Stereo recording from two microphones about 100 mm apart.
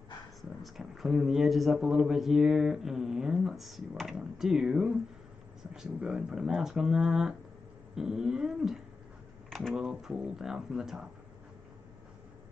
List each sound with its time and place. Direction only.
0.4 s speech: centre (ahead or behind)
9.5 s typing: 5° left (ahead or behind)
9.8 s speech: 5° right (ahead or behind)